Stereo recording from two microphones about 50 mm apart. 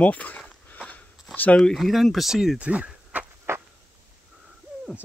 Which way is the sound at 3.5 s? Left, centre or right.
Right.